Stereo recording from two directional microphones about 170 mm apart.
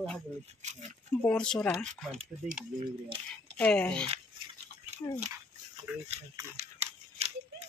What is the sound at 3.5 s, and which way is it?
Speech, 5° left (ahead or behind).